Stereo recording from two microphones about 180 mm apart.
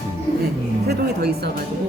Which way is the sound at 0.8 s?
60° right (ahead or behind).